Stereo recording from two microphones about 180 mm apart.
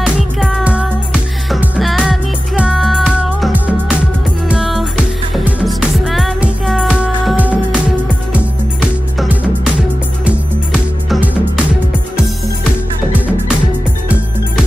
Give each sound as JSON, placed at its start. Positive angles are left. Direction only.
{"t": 0.0, "sound": "music", "side_deg": 0}
{"t": 10.2, "sound": "music", "side_deg": -5}